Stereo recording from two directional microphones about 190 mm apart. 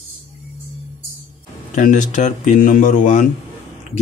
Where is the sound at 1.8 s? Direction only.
45° left (ahead or behind).